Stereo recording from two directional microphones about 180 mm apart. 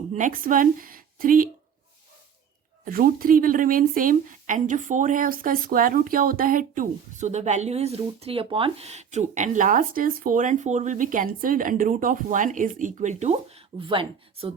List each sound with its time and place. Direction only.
0.1 s speech: 45° right (ahead or behind)
2.8 s speech: 55° right (ahead or behind); by 14.5 s 30° right (ahead or behind)